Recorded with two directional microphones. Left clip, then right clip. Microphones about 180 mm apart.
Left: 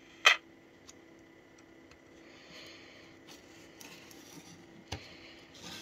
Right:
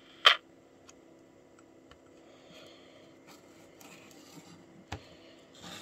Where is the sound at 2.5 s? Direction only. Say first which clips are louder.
Left 3 dB; 10° right (ahead or behind).